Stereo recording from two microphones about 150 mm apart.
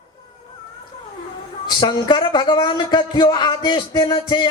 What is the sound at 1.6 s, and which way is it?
A man's voice, 30° left (ahead or behind).